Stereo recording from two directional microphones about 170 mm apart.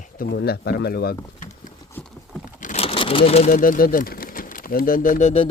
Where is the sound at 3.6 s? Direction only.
55° left (ahead or behind).